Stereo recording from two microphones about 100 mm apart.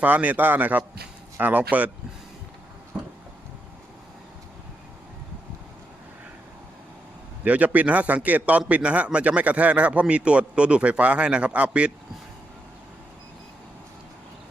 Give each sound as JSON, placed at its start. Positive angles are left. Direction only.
{"t": 0.0, "sound": "a man's voice", "side_deg": -15}
{"t": 2.9, "sound": "a sound", "side_deg": -15}
{"t": 7.4, "sound": "a man's voice", "side_deg": -15}